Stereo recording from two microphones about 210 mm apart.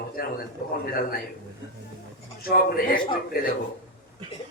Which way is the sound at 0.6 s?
45° left (ahead or behind).